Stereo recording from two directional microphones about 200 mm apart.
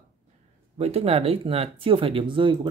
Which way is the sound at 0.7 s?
30° right (ahead or behind).